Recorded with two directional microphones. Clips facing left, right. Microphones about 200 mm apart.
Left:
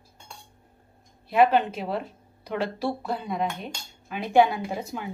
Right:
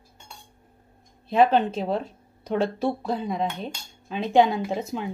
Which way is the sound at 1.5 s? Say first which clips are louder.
Right 2 dB; 25° right (ahead or behind).